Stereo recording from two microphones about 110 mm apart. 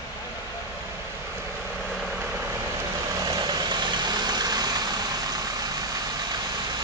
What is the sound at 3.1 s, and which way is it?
Vehicle, 35° right (ahead or behind).